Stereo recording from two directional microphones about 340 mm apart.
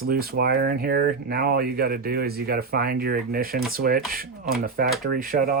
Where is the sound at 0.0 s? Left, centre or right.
Right.